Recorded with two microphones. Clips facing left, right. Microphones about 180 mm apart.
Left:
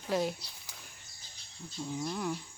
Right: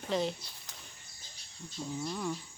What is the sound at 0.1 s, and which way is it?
Speech, 5° left (ahead or behind).